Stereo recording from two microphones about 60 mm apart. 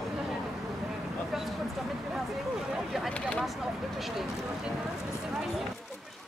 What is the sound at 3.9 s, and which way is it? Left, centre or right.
Speech, centre.